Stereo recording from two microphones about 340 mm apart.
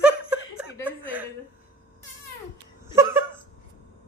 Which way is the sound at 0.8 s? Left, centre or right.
Centre.